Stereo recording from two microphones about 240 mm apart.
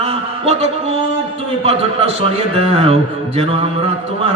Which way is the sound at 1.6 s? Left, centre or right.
Right.